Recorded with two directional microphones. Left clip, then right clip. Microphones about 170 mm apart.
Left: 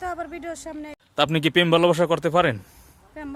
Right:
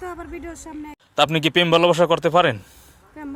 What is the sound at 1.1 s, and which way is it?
Speech, 15° left (ahead or behind).